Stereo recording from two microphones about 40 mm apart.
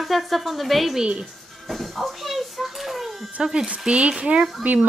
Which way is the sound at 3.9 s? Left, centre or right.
Right.